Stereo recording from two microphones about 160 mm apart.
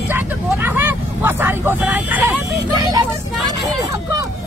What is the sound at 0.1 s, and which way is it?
Vehicle, 15° right (ahead or behind).